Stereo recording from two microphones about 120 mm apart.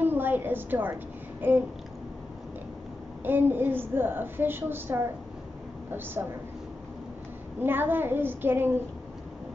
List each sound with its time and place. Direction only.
0.0 s a sound: 15° right (ahead or behind)
1.4 s a woman's voice: 15° right (ahead or behind)
3.3 s a woman's voice: 15° right (ahead or behind)
7.6 s a woman's voice: 15° right (ahead or behind)